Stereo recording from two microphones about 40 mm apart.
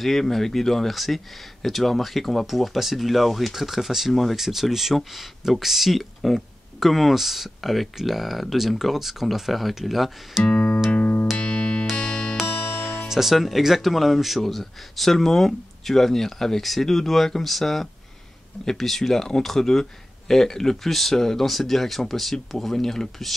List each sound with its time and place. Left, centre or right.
0.0 s speech: centre
10.4 s music: left
11.0 s music: left
12.7 s music: centre
13.1 s speech: centre